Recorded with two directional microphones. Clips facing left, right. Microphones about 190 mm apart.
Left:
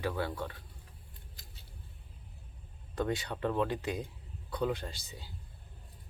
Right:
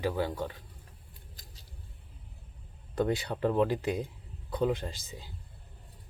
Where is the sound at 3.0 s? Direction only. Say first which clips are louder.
Right 4 dB; 30° right (ahead or behind).